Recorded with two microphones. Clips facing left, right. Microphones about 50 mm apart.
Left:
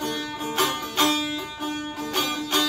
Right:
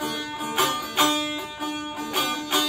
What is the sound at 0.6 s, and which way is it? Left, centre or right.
Music, centre.